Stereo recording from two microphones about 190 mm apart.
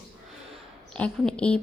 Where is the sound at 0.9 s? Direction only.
5° left (ahead or behind).